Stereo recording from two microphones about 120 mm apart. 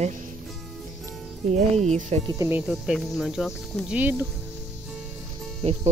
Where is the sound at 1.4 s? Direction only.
70° right (ahead or behind).